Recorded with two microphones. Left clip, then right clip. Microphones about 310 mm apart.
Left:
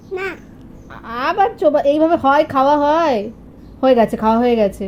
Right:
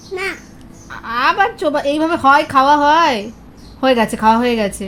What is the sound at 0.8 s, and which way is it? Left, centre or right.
A woman's voice, right.